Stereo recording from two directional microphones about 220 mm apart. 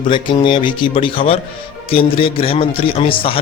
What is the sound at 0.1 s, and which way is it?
Speech, 20° left (ahead or behind).